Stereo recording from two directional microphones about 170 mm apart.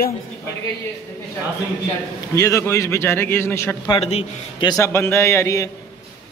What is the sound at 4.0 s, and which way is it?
Speech, 40° left (ahead or behind).